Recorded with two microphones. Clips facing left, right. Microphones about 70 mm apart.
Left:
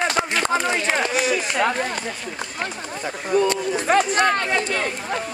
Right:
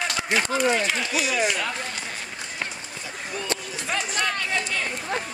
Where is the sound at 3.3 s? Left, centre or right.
Left.